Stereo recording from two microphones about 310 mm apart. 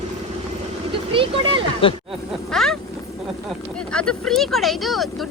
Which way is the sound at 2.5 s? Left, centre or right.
Centre.